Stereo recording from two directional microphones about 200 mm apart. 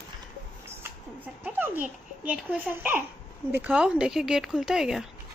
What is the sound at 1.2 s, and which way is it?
A child's voice, 10° right (ahead or behind).